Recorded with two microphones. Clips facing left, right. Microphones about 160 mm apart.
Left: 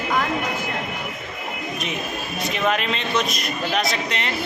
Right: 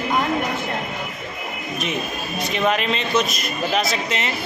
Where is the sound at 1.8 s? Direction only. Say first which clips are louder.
Right 4 dB; centre (ahead or behind).